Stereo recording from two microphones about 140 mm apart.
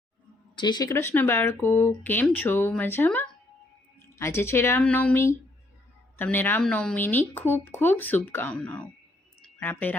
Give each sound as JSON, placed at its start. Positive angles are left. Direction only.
{"t": 0.5, "sound": "speech", "side_deg": 35}
{"t": 0.9, "sound": "speech", "side_deg": 20}
{"t": 9.4, "sound": "a sound", "side_deg": 10}